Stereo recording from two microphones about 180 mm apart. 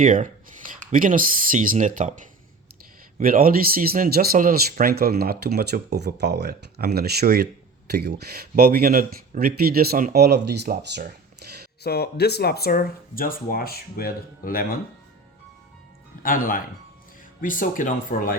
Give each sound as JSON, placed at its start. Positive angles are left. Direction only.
{"t": 0.0, "sound": "speech", "side_deg": -45}
{"t": 11.8, "sound": "speech", "side_deg": 65}
{"t": 16.2, "sound": "speech", "side_deg": 50}